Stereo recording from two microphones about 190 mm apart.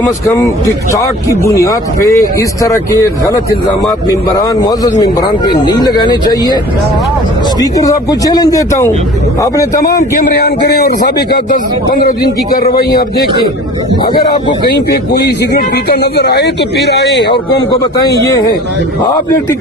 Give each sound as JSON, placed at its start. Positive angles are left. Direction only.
{"t": 0.9, "sound": "speech", "side_deg": 15}
{"t": 4.4, "sound": "speech", "side_deg": 20}
{"t": 7.6, "sound": "speech", "side_deg": 20}
{"t": 9.8, "sound": "a man's voice", "side_deg": 50}
{"t": 14.0, "sound": "speech", "side_deg": 25}
{"t": 14.7, "sound": "a man's voice", "side_deg": 60}
{"t": 18.0, "sound": "speech", "side_deg": 20}